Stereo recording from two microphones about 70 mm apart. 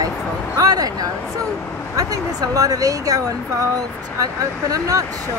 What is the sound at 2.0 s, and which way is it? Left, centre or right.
Speech, right.